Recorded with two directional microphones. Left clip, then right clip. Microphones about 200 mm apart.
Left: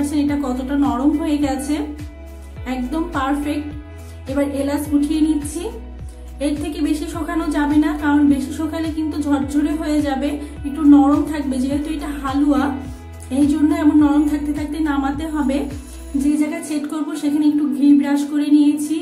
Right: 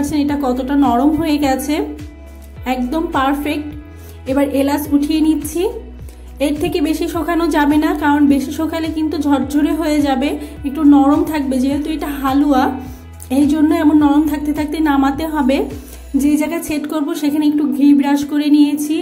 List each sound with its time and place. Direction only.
0.1 s a woman's voice: 25° right (ahead or behind)